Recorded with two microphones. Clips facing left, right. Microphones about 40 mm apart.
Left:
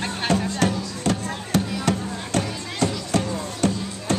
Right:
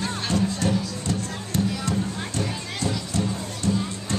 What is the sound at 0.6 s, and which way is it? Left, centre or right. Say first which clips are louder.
Music: left 3 dB; left.